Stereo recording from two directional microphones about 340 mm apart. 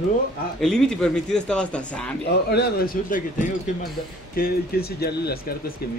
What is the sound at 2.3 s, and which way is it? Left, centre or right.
Speech, left.